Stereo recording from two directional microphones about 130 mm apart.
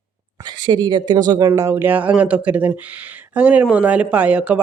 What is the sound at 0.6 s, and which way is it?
Speech, 35° right (ahead or behind).